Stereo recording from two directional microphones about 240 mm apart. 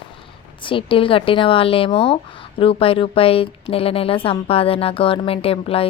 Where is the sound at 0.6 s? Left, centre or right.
Left.